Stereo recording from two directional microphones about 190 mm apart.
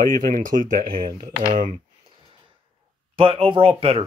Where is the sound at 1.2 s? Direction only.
25° right (ahead or behind).